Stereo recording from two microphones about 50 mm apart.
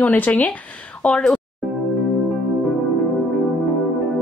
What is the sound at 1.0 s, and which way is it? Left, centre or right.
Speech, centre.